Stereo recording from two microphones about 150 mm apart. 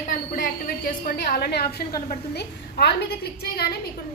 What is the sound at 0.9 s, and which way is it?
A woman's voice, 70° left (ahead or behind).